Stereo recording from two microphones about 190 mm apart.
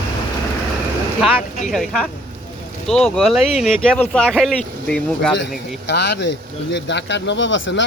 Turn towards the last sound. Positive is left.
turn(degrees=80)